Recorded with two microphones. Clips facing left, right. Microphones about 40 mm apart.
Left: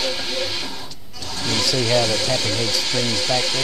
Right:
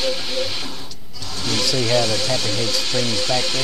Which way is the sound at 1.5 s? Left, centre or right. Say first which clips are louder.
Even; centre.